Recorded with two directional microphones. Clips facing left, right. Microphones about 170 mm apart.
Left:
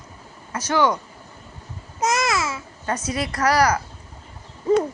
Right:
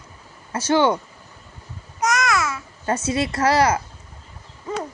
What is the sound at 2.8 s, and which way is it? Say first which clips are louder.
Speech: right 3 dB; 25° right (ahead or behind).